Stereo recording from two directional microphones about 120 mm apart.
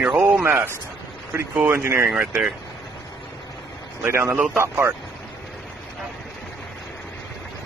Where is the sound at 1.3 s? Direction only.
15° right (ahead or behind).